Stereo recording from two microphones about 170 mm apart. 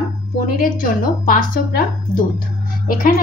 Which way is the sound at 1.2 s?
55° left (ahead or behind).